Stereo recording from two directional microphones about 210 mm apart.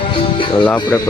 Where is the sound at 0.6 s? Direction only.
10° left (ahead or behind).